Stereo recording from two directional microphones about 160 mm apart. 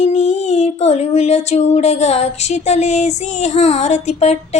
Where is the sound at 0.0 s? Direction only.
45° left (ahead or behind).